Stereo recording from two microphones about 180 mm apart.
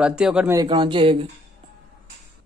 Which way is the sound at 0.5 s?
20° right (ahead or behind).